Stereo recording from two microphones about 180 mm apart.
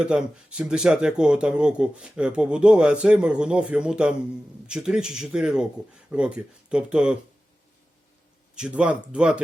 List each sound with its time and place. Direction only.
0.0 s speech: 5° right (ahead or behind)
8.5 s speech: 5° right (ahead or behind)